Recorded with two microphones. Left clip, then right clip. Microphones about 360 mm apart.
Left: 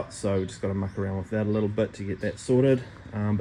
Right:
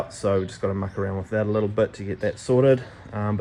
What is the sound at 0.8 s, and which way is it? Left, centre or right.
Speech, right.